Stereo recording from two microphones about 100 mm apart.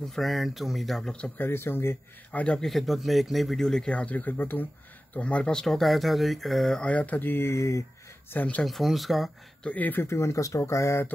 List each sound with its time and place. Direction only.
0.1 s speech: centre (ahead or behind); by 2.4 s 25° left (ahead or behind)
2.4 s speech: 5° left (ahead or behind); by 7.8 s 30° left (ahead or behind)
8.3 s speech: 15° left (ahead or behind)
8.6 s speech: centre (ahead or behind)
9.7 s speech: 15° left (ahead or behind)